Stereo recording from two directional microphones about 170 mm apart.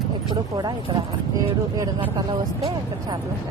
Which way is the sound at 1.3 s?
20° right (ahead or behind).